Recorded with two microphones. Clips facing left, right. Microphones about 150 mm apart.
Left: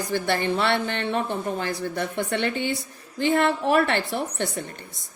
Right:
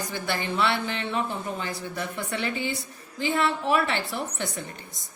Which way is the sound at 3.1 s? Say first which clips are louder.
Left 4 dB; 50° left (ahead or behind).